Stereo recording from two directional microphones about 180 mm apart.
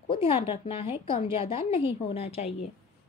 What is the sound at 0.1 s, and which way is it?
Speech, 30° left (ahead or behind).